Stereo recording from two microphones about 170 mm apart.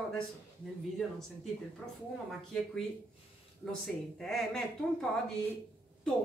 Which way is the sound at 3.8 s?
Centre (ahead or behind).